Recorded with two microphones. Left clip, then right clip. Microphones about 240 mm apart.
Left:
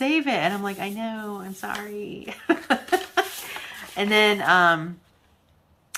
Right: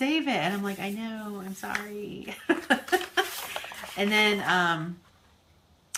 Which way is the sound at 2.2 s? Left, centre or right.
Centre.